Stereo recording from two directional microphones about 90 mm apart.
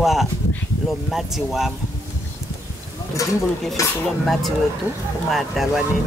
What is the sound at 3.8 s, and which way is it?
Speech, 40° left (ahead or behind).